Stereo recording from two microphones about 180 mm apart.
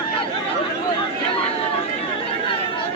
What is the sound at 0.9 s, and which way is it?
Chatter, 30° left (ahead or behind).